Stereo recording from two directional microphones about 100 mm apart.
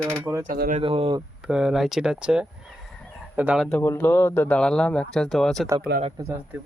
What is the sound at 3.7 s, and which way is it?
Speech, 20° left (ahead or behind).